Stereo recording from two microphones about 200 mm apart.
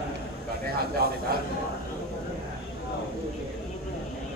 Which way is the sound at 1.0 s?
50° right (ahead or behind).